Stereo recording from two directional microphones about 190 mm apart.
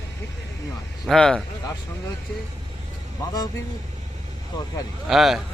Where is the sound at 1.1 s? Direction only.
5° left (ahead or behind).